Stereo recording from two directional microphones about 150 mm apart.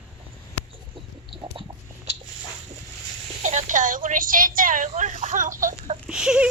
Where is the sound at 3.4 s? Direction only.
55° right (ahead or behind).